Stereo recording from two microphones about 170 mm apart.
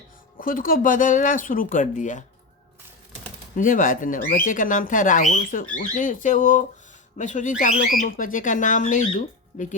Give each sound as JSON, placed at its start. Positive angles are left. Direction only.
{"t": 0.3, "sound": "speech", "side_deg": 55}
{"t": 3.5, "sound": "speech", "side_deg": 50}